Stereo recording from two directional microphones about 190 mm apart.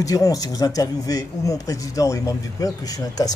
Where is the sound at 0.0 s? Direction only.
20° left (ahead or behind).